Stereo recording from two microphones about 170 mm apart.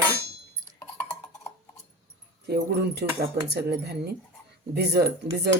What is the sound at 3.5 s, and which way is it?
Speech, 80° right.